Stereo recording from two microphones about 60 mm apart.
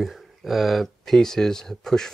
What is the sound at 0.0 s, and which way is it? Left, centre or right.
Speech, centre.